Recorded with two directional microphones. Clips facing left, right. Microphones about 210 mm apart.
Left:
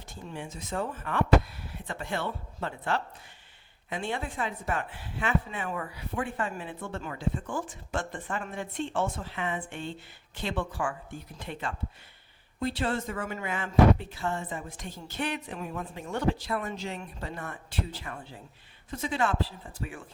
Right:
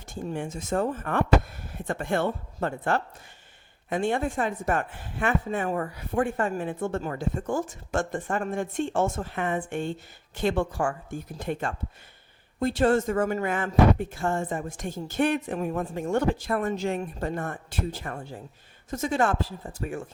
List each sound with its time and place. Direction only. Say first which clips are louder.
0.1 s speech: right 8 dB; 45° right (ahead or behind)